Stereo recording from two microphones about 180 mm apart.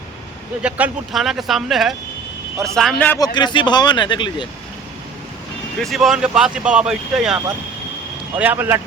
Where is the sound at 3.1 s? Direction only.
25° left (ahead or behind).